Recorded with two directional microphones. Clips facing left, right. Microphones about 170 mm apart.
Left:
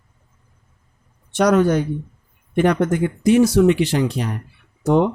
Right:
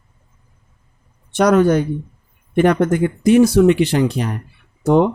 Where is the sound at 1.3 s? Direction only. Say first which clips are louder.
Right 2 dB; 55° right (ahead or behind).